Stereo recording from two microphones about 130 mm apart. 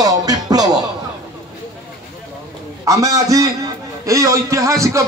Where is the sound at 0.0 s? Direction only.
30° right (ahead or behind).